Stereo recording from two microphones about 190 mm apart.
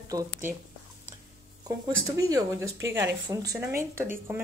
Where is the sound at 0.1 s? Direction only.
15° right (ahead or behind).